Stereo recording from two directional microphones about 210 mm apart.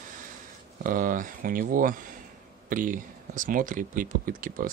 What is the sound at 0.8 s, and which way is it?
Speech, 40° right (ahead or behind).